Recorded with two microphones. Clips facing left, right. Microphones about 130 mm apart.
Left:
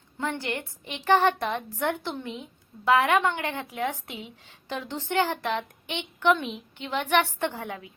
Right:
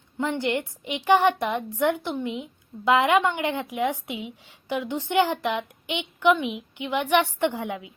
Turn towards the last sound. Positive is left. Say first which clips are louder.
# right 5 dB
turn(degrees=-15)  # may be behind; listen again after turning